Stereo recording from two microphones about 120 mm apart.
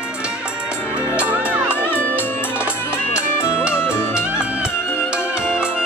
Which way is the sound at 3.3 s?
20° left (ahead or behind).